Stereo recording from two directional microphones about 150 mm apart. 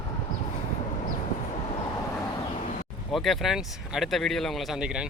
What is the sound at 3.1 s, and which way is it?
Speech, centre (ahead or behind).